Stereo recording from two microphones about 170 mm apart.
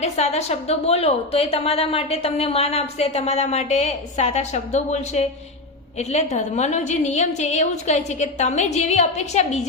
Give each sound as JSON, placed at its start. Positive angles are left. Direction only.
{"t": 0.0, "sound": "a woman's voice", "side_deg": 40}